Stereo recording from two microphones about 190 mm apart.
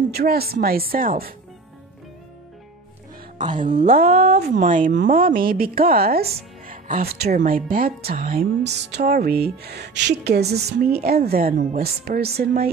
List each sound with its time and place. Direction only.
0.1 s speech: 55° right (ahead or behind)
3.8 s speech: 50° right (ahead or behind)
4.1 s speech: 30° right (ahead or behind)
4.6 s speech: 45° right (ahead or behind)